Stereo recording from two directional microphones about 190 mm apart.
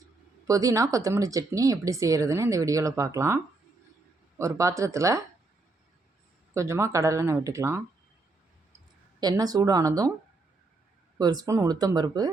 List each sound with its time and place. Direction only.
0.4 s speech: 15° right (ahead or behind)
6.5 s speech: 15° right (ahead or behind)
9.2 s speech: 20° right (ahead or behind)
11.2 s speech: 20° right (ahead or behind)